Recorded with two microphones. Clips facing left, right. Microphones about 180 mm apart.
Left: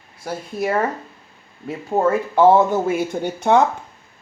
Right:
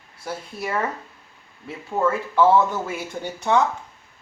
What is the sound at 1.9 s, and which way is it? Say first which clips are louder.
Speech: left 4 dB; 40° left (ahead or behind).